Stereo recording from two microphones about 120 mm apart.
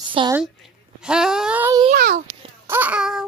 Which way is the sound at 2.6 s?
15° right (ahead or behind).